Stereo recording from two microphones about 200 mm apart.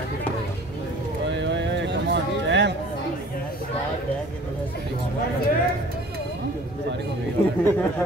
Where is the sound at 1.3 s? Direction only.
65° right (ahead or behind).